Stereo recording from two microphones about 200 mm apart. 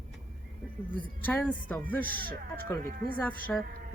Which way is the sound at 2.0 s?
45° right (ahead or behind).